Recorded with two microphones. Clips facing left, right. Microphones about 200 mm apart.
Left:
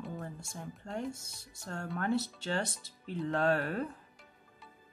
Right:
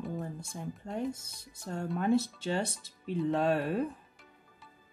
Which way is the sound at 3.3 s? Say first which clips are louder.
Even; 15° right (ahead or behind).